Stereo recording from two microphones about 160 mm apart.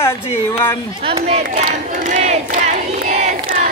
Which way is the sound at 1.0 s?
35° right (ahead or behind).